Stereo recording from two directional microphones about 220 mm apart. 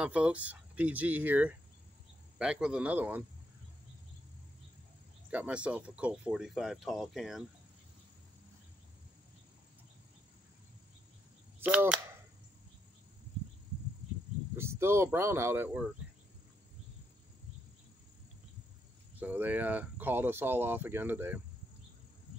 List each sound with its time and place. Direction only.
0.0 s speech: 5° right (ahead or behind)
5.3 s speech: 5° right (ahead or behind)
11.6 s speech: 5° right (ahead or behind)
14.6 s speech: 10° right (ahead or behind)
19.1 s speech: 10° right (ahead or behind)